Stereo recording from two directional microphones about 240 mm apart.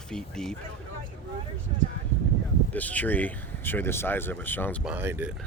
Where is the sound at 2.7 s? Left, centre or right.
Centre.